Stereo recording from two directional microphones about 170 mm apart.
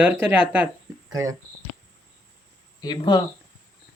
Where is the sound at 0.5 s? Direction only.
10° right (ahead or behind).